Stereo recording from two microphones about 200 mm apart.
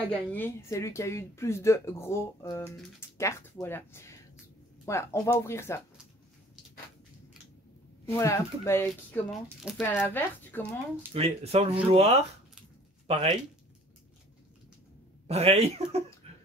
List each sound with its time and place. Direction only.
0.1 s speech: 10° left (ahead or behind)
8.2 s speech: 15° left (ahead or behind); by 9.8 s centre (ahead or behind)
9.8 s speech: 10° left (ahead or behind)
11.1 s speech: 30° right (ahead or behind)
15.2 s speech: 30° right (ahead or behind)
16.2 s a sound: 30° right (ahead or behind)